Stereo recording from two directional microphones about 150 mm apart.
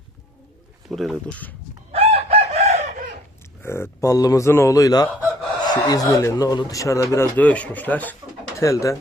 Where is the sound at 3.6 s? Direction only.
15° left (ahead or behind).